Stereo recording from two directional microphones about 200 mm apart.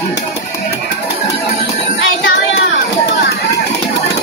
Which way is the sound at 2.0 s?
75° left (ahead or behind).